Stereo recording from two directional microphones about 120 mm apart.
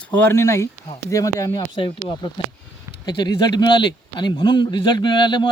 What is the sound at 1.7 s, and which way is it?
A man's voice, 45° left (ahead or behind).